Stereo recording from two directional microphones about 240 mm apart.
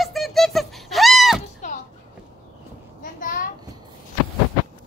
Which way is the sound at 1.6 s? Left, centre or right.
Left.